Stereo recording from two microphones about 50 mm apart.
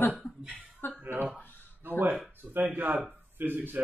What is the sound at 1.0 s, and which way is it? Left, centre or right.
Speech, right.